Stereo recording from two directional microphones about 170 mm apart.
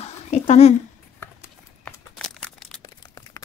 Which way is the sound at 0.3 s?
40° left (ahead or behind).